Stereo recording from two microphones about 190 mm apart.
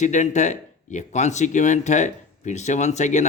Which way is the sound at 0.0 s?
40° left (ahead or behind).